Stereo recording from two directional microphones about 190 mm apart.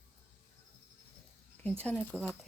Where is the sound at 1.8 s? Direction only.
5° left (ahead or behind).